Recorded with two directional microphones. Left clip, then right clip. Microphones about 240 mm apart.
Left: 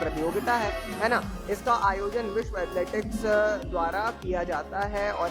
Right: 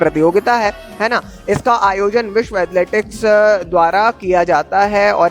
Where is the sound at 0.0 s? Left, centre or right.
Right.